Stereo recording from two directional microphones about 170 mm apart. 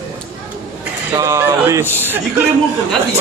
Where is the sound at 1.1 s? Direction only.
20° right (ahead or behind).